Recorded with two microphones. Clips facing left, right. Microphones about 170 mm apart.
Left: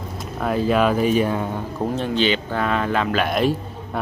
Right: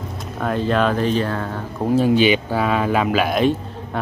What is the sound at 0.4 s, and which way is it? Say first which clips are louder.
Speech: even; 5° left (ahead or behind).